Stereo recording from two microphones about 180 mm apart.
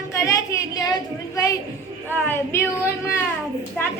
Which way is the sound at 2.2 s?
15° left (ahead or behind).